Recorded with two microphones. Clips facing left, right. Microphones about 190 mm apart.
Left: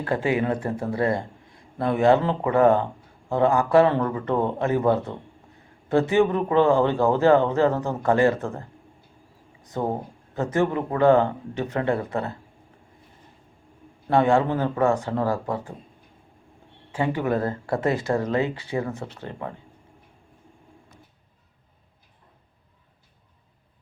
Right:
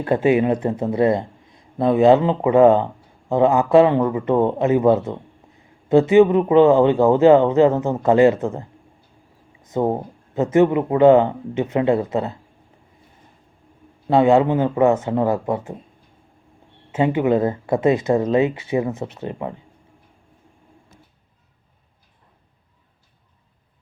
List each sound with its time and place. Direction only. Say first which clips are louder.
0.0 s speech: right 7 dB; 20° right (ahead or behind)
9.6 s speech: right 6 dB; 20° right (ahead or behind)
14.1 s speech: right 5 dB; 20° right (ahead or behind)
16.9 s speech: right 6 dB; 20° right (ahead or behind)